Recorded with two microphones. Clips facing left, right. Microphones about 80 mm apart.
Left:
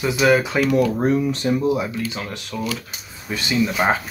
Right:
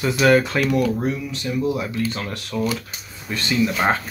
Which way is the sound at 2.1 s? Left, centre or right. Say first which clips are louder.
Right 1 dB; centre.